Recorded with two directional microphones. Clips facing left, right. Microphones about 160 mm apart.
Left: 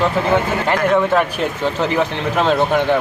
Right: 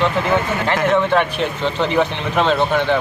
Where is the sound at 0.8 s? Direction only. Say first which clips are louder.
Even; 5° left (ahead or behind).